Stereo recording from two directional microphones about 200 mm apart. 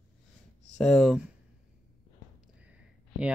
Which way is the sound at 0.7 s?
5° left (ahead or behind).